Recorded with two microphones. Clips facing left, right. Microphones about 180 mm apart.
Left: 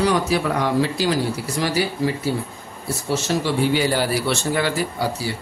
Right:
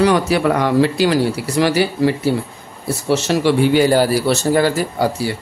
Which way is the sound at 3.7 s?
45° right (ahead or behind).